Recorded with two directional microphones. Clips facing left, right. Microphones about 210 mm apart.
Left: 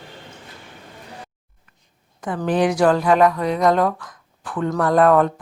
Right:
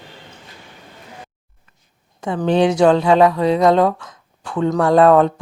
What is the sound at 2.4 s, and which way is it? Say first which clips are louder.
Speech: right 3 dB; 25° right (ahead or behind).